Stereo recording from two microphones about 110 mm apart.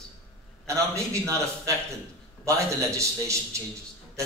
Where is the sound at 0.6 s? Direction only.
25° right (ahead or behind).